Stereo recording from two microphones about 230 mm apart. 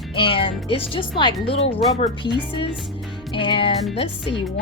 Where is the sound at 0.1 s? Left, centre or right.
Left.